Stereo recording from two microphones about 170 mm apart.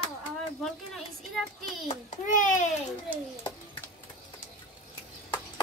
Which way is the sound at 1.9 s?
45° left (ahead or behind).